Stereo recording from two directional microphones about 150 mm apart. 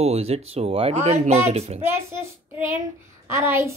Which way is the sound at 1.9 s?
15° right (ahead or behind).